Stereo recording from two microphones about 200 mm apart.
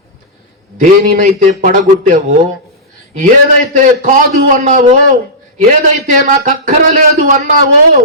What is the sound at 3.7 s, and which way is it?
Speech, 40° right (ahead or behind).